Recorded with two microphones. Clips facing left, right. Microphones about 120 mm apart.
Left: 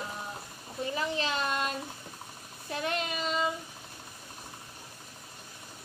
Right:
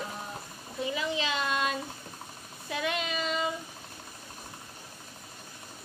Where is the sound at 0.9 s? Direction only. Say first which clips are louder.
Left 1 dB; 40° left (ahead or behind).